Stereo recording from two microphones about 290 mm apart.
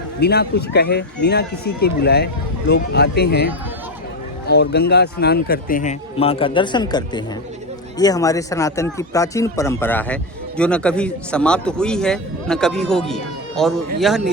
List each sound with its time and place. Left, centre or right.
0.2 s a man's voice: left; by 14.2 s centre